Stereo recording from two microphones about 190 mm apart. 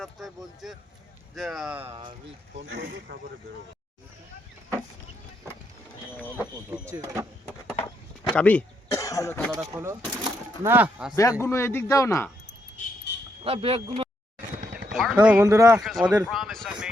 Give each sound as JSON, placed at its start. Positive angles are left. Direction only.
{"t": 0.0, "sound": "speech", "side_deg": 0}
{"t": 2.7, "sound": "speech", "side_deg": -60}
{"t": 6.9, "sound": "a sound", "side_deg": -10}
{"t": 8.4, "sound": "speech", "side_deg": 5}
{"t": 9.7, "sound": "speech", "side_deg": -15}
{"t": 11.1, "sound": "a man's voice", "side_deg": 15}
{"t": 13.1, "sound": "vehicle", "side_deg": 60}
{"t": 13.4, "sound": "speech", "side_deg": -30}
{"t": 14.9, "sound": "speech", "side_deg": 0}
{"t": 15.4, "sound": "speech", "side_deg": -15}
{"t": 15.8, "sound": "speech", "side_deg": 0}
{"t": 16.2, "sound": "a sound", "side_deg": 0}